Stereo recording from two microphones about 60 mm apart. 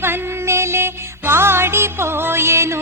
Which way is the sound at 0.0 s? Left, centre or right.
Right.